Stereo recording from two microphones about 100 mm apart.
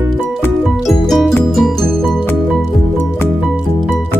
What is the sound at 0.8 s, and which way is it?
Music, centre (ahead or behind).